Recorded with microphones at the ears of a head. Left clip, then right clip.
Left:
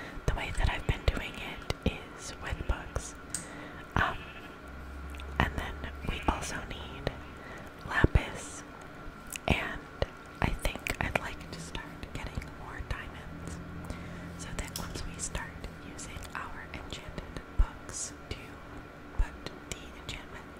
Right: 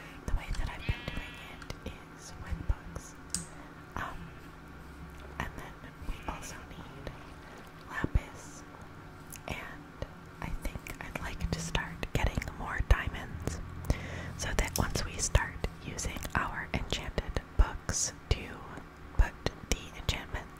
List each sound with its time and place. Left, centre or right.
0.2 s whispering: left
5.4 s whispering: left
7.9 s whispering: left
9.4 s whispering: left
11.5 s whispering: right
14.4 s whispering: right